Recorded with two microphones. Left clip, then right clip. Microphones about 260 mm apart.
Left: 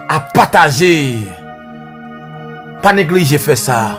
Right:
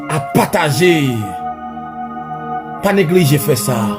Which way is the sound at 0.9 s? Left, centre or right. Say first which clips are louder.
Left 1 dB; left.